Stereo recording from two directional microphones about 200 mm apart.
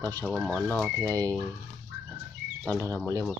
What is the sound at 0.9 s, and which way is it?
Speech, 15° right (ahead or behind).